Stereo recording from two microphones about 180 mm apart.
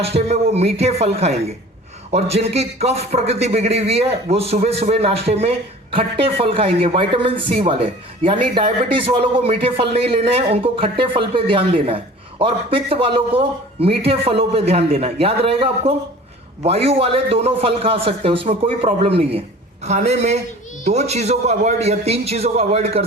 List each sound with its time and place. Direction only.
0.0 s a man's voice: 35° right (ahead or behind)